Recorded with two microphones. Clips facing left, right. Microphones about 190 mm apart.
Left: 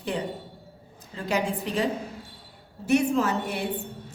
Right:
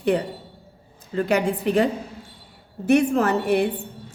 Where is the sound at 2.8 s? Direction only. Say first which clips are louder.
Right 4 dB; 55° right (ahead or behind).